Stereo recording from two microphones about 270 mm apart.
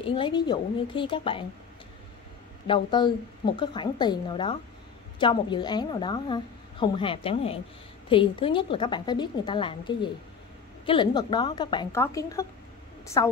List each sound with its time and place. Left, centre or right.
0.0 s a woman's voice: centre
2.6 s a woman's voice: centre